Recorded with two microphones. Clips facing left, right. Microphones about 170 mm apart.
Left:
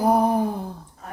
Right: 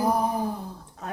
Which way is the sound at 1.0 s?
80° right.